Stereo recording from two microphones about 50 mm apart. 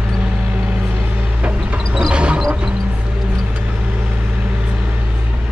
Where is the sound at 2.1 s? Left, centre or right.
Right.